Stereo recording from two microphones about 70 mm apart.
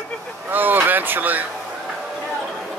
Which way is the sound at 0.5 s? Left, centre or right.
Right.